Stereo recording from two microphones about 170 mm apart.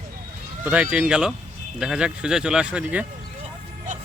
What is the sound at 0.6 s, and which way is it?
Speech, 5° right (ahead or behind).